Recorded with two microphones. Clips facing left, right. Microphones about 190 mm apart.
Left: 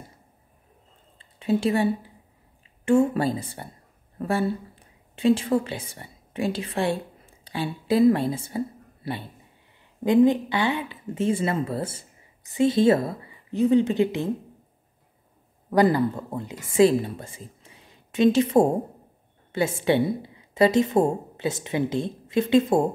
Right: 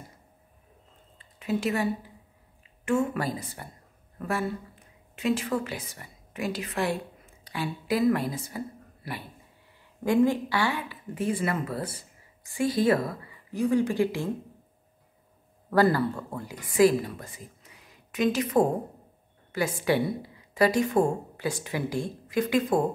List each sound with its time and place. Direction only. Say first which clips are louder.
1.1 s a sound: left 5 dB; 30° left (ahead or behind)
2.8 s a woman's voice: left 6 dB; 30° left (ahead or behind)
15.7 s speech: left 3 dB; 15° left (ahead or behind)